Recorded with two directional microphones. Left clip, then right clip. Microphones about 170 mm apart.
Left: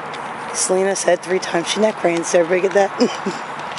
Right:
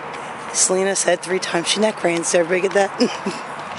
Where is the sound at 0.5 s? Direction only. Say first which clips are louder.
Left 1 dB; 5° right (ahead or behind).